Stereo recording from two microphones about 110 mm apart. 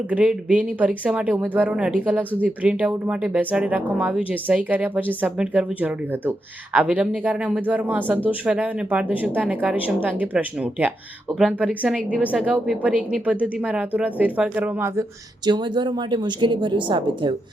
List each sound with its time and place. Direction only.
0.1 s speech: 10° right (ahead or behind)
15.4 s a woman's voice: 40° right (ahead or behind)